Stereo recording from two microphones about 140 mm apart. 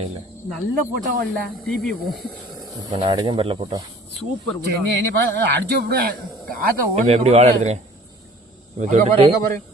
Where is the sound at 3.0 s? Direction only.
35° right (ahead or behind).